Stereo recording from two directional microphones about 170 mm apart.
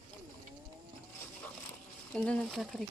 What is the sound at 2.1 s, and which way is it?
Speech, 5° left (ahead or behind).